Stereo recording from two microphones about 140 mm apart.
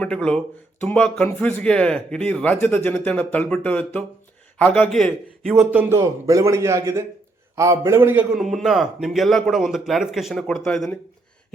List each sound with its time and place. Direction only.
0.0 s a man's voice: 5° left (ahead or behind)
6.0 s a man's voice: 25° right (ahead or behind); by 10.9 s 5° left (ahead or behind)